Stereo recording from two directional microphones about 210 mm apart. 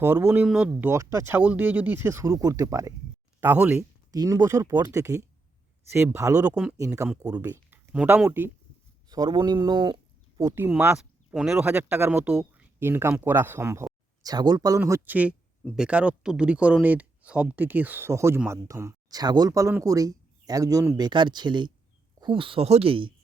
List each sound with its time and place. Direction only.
0.0 s speech: 10° right (ahead or behind)
10.5 s speech: 10° right (ahead or behind); by 23.1 s 25° right (ahead or behind)